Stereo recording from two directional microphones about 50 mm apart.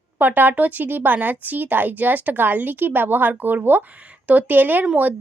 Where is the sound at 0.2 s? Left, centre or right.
Right.